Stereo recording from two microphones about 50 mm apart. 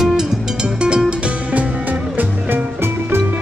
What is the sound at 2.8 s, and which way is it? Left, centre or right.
Music, right.